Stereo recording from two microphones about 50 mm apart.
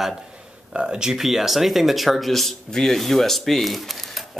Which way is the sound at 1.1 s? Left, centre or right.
Centre.